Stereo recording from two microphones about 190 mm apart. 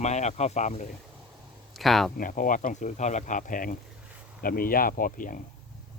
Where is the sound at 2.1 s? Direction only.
45° left (ahead or behind).